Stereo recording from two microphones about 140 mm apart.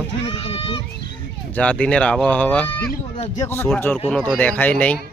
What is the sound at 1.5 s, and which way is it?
Speech, 10° left (ahead or behind).